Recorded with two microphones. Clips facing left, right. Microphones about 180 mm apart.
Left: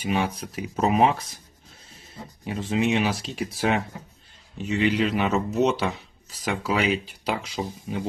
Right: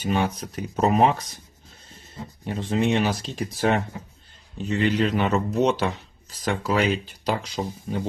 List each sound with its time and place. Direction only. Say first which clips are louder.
0.0 s speech: right 1 dB; 5° left (ahead or behind)
2.5 s speech: right 1 dB; 5° left (ahead or behind)